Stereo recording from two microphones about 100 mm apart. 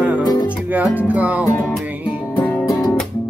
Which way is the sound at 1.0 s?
15° right (ahead or behind).